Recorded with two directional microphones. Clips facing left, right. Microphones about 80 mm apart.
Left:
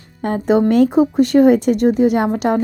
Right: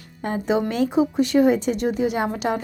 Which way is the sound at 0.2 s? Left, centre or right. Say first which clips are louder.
Left 7 dB; left.